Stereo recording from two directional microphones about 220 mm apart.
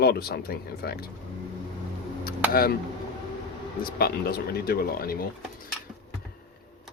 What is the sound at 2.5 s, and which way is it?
Speech, 40° left (ahead or behind).